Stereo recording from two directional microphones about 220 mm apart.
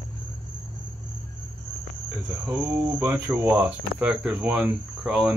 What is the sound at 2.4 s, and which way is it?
Speech, 5° right (ahead or behind).